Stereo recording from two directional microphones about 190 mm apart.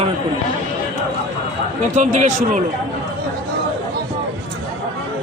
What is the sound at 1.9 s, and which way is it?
Speech, 40° right (ahead or behind).